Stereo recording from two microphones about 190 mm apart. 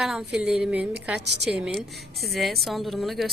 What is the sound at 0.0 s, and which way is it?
A woman's voice, 5° right (ahead or behind).